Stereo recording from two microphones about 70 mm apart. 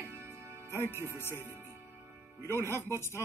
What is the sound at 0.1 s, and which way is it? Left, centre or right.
Music, right.